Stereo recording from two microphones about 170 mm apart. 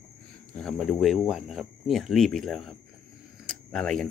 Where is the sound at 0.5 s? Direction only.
Centre (ahead or behind).